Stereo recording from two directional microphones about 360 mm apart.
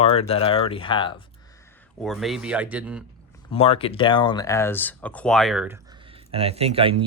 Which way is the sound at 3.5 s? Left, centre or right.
Centre.